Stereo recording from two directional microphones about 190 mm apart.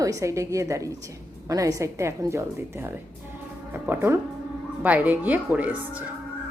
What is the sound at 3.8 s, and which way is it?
A woman's voice, 10° right (ahead or behind).